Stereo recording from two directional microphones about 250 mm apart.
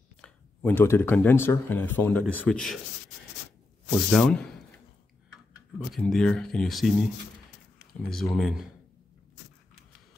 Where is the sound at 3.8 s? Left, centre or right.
Centre.